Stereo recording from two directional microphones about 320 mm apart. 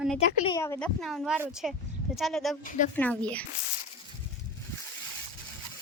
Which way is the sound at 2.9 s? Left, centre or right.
Centre.